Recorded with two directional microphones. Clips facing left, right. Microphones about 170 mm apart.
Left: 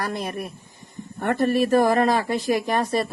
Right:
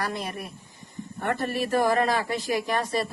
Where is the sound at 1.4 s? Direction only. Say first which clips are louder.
Left 7 dB; 50° left (ahead or behind).